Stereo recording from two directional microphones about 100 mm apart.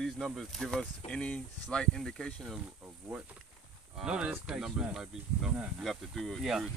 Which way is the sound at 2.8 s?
15° right (ahead or behind).